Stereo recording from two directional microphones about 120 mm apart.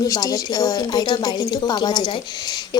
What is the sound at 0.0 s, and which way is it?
A woman's voice, 30° left (ahead or behind).